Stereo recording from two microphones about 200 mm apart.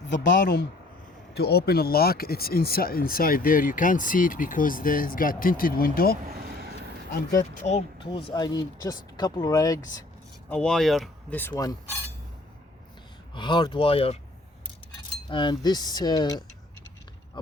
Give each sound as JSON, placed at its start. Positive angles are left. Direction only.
{"t": 0.2, "sound": "speech", "side_deg": 60}
{"t": 6.2, "sound": "vehicle", "side_deg": -50}
{"t": 7.5, "sound": "speech", "side_deg": 30}
{"t": 10.5, "sound": "speech", "side_deg": 5}
{"t": 13.3, "sound": "speech", "side_deg": 20}
{"t": 15.3, "sound": "speech", "side_deg": 25}
{"t": 17.4, "sound": "a sound", "side_deg": 25}